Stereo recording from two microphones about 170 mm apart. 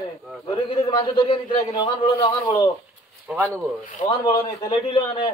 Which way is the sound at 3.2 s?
10° right (ahead or behind).